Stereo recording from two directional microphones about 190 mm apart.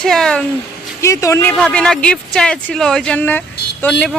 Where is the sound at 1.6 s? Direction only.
5° left (ahead or behind).